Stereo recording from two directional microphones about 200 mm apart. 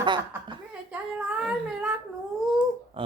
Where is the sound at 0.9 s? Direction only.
5° right (ahead or behind).